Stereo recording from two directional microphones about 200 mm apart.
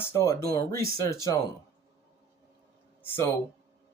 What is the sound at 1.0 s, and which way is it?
Speech, 15° left (ahead or behind).